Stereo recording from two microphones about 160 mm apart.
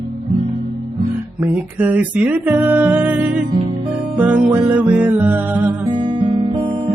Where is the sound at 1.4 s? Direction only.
10° right (ahead or behind).